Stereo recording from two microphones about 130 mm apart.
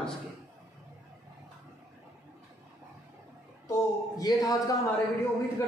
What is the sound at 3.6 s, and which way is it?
A man's voice, 30° left (ahead or behind).